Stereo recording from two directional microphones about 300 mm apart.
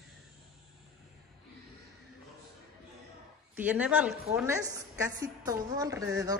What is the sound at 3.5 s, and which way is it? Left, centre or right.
A woman's voice, centre.